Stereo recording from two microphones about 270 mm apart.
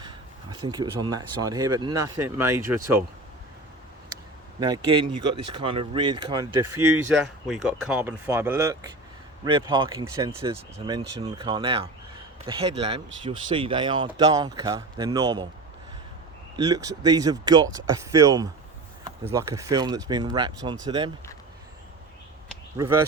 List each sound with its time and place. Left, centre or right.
0.7 s speech: centre
4.6 s speech: centre
7.4 s speech: centre
16.6 s speech: centre